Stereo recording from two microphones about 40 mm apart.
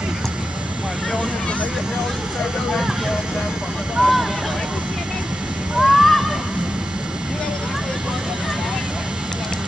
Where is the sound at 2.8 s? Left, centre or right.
Centre.